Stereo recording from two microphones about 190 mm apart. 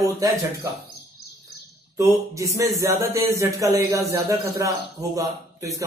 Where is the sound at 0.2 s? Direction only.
20° right (ahead or behind).